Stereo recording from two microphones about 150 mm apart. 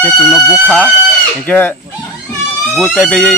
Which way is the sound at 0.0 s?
5° left (ahead or behind).